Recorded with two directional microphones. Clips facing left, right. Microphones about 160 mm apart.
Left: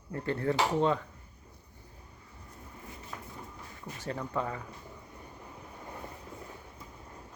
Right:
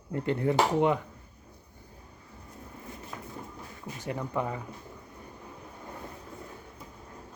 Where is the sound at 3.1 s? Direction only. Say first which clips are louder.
Right 1 dB; 5° right (ahead or behind).